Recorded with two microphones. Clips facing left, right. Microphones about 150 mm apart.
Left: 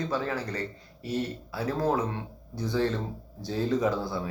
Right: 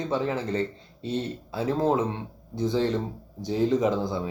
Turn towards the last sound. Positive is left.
turn(degrees=-20)  # may be behind; listen again after turning